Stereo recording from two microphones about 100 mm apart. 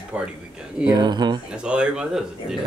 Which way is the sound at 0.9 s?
45° right (ahead or behind).